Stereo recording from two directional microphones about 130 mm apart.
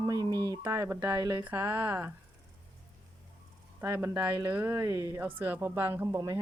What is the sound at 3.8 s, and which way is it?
Speech, 20° right (ahead or behind).